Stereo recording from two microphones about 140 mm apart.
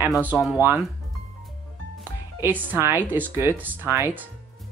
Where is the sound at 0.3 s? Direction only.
15° right (ahead or behind).